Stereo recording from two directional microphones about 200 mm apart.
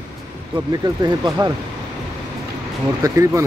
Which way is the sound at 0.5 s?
20° right (ahead or behind).